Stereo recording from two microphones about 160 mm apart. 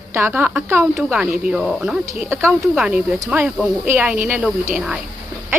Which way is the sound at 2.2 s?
15° right (ahead or behind).